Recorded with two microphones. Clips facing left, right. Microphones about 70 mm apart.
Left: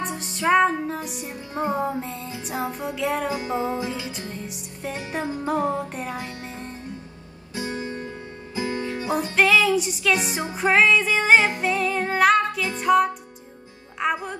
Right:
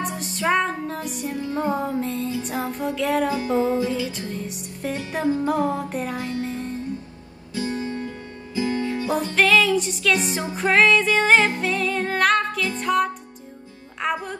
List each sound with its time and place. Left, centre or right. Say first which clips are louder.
0.0 s music: even; centre
1.3 s music: right 2 dB; left
1.7 s music: right 2 dB; centre
3.3 s music: right 4 dB; left
5.5 s music: right 1 dB; centre
6.3 s music: right 8 dB; left
7.5 s guitar: right 3 dB; left
8.5 s music: right 3 dB; left
9.3 s music: even; centre